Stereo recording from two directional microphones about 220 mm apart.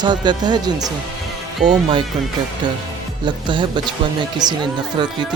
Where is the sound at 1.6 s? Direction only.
40° right (ahead or behind).